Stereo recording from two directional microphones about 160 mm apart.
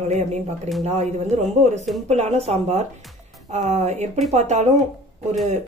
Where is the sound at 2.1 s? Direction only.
45° right (ahead or behind).